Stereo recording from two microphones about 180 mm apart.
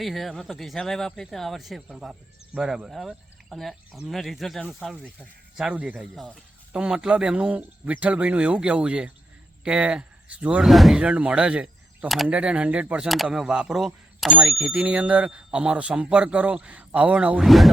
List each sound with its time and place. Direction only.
0.0 s speech: centre (ahead or behind)